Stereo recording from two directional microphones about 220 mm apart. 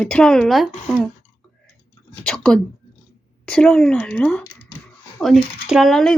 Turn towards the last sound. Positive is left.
turn(degrees=0)  # may be behind; listen again after turning